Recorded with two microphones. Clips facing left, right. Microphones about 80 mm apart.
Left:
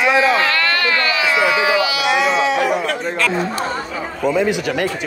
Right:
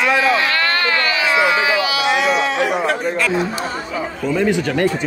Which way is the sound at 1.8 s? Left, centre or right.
Right.